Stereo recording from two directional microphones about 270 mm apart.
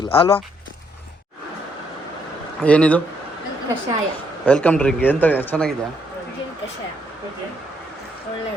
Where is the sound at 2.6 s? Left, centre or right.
Centre.